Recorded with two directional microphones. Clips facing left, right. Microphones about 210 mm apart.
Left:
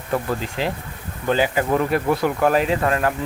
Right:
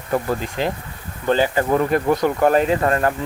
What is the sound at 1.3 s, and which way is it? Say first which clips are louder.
Speech: right 2 dB; 10° left (ahead or behind).